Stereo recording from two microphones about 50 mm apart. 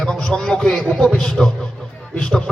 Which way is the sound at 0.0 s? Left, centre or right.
Centre.